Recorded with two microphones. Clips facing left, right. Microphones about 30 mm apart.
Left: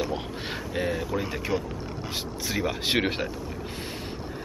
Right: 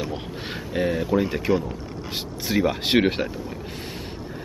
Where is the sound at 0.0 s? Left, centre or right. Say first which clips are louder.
Even; centre.